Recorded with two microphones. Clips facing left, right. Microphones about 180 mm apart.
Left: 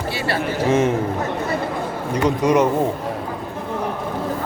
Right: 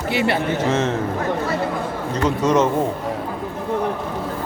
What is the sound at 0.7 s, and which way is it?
Speech, 10° left (ahead or behind).